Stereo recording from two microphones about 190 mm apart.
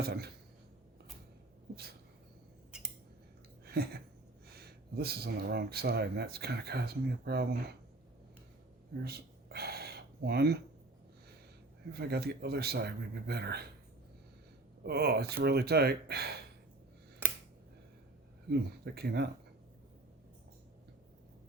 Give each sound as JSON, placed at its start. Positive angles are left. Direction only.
{"t": 0.0, "sound": "speech", "side_deg": -55}
{"t": 1.7, "sound": "speech", "side_deg": -55}
{"t": 3.7, "sound": "a sound", "side_deg": -55}
{"t": 4.5, "sound": "speech", "side_deg": -55}
{"t": 9.0, "sound": "a sound", "side_deg": -55}
{"t": 11.9, "sound": "speech", "side_deg": -55}
{"t": 14.8, "sound": "speech", "side_deg": -55}
{"t": 17.2, "sound": "a sound", "side_deg": -10}
{"t": 18.5, "sound": "speech", "side_deg": -60}